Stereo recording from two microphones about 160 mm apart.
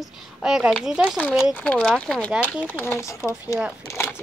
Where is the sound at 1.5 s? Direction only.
5° left (ahead or behind).